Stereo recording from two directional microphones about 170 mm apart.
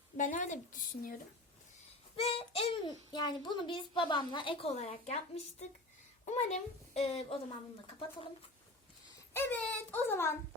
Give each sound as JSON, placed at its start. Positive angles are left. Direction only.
{"t": 0.2, "sound": "speech", "side_deg": 50}
{"t": 2.1, "sound": "a child's voice", "side_deg": 35}
{"t": 9.3, "sound": "a child's voice", "side_deg": 10}